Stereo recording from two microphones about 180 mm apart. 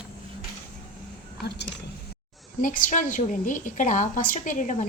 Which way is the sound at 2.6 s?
50° left (ahead or behind).